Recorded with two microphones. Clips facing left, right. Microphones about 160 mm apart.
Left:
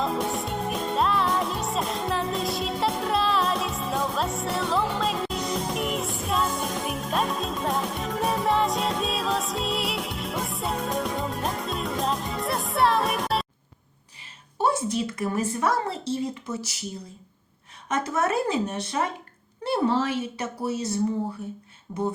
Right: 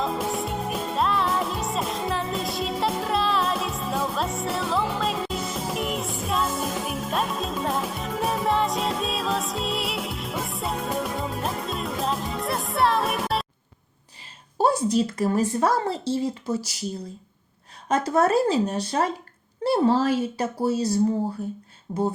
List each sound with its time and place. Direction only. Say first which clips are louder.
0.0 s music: even; centre (ahead or behind)
14.6 s a woman's voice: right 4 dB; 35° right (ahead or behind)
17.8 s a woman's voice: right 5 dB; 30° right (ahead or behind)
21.9 s a sound: right 4 dB; 20° right (ahead or behind)